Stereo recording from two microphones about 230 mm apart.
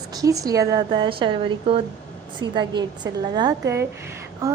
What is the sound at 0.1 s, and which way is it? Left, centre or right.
A woman's voice, centre.